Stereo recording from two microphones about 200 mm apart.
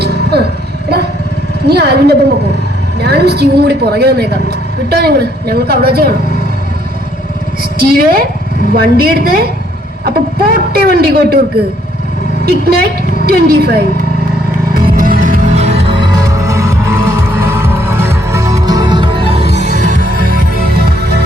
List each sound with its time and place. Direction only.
0.0 s a sound: 50° right (ahead or behind)
1.6 s a woman's voice: 55° right (ahead or behind)
7.8 s a woman's voice: 50° right (ahead or behind)
10.8 s a woman's voice: 50° right (ahead or behind)
12.5 s a woman's voice: 50° right (ahead or behind)
14.7 s music: 45° right (ahead or behind); by 19.5 s 25° right (ahead or behind)
19.6 s music: 40° right (ahead or behind)